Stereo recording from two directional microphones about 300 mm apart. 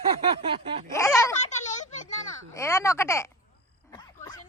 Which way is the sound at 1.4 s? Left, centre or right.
Left.